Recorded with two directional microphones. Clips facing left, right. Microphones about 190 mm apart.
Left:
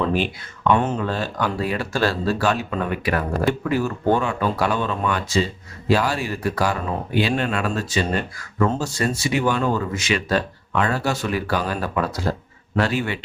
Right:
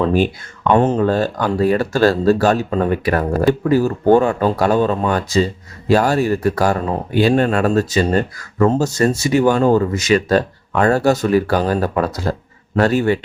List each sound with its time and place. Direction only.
0.7 s speech: 40° right (ahead or behind)